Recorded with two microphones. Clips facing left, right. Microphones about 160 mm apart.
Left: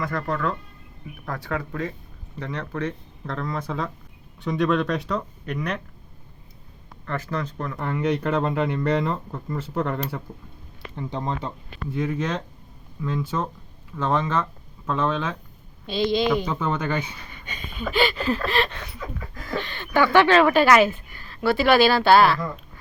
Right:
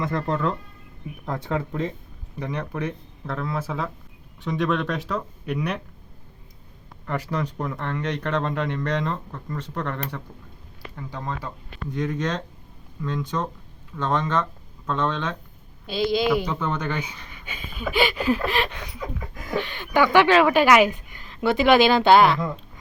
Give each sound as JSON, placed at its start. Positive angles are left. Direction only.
{"t": 0.0, "sound": "speech", "side_deg": -20}
{"t": 7.0, "sound": "speech", "side_deg": -15}
{"t": 7.8, "sound": "speech", "side_deg": 10}
{"t": 10.9, "sound": "speech", "side_deg": 20}
{"t": 11.9, "sound": "speech", "side_deg": 5}
{"t": 16.5, "sound": "speech", "side_deg": 5}
{"t": 17.3, "sound": "a sound", "side_deg": -5}